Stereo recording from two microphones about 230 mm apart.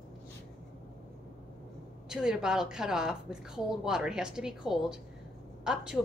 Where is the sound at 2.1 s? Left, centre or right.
Centre.